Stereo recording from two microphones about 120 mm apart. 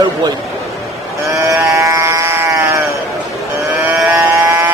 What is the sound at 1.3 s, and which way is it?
Sheep, 25° right (ahead or behind).